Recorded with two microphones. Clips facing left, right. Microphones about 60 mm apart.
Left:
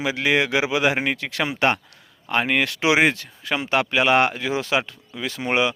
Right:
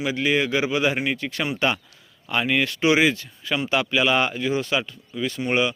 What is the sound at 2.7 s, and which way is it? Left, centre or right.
Speech, left.